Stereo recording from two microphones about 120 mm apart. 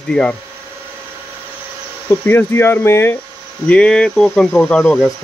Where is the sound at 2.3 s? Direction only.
20° left (ahead or behind).